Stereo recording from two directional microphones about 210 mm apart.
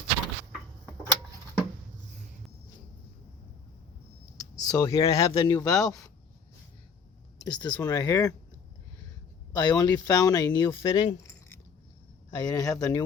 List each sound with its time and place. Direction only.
4.7 s speech: 15° left (ahead or behind)
5.5 s speech: 15° left (ahead or behind)
7.4 s speech: 20° left (ahead or behind)
9.5 s speech: 20° left (ahead or behind)